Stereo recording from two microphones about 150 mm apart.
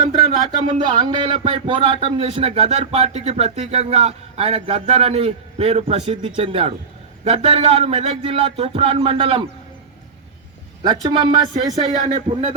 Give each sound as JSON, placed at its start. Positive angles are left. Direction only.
{"t": 0.6, "sound": "speech", "side_deg": -35}
{"t": 11.0, "sound": "speech", "side_deg": -30}
{"t": 12.0, "sound": "speech", "side_deg": -55}